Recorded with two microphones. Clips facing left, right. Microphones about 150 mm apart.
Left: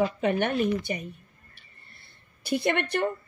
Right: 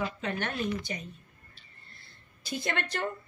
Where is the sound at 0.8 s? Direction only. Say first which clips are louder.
Left 6 dB; 60° left (ahead or behind).